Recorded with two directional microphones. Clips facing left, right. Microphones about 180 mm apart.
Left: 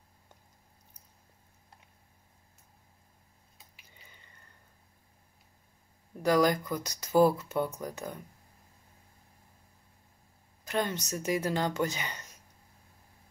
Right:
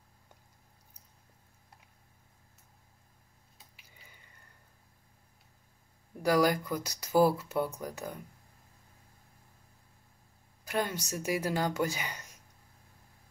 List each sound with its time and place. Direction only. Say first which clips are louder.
3.5 s a sound: left 1 dB; centre (ahead or behind)
6.2 s speech: left 1 dB; 5° right (ahead or behind)
10.6 s speech: left 1 dB; 10° right (ahead or behind)